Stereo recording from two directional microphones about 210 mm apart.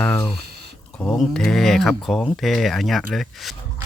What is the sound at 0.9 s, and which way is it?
Speech, 5° left (ahead or behind).